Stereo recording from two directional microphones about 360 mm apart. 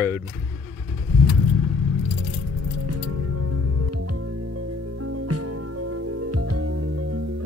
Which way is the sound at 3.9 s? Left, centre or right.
Right.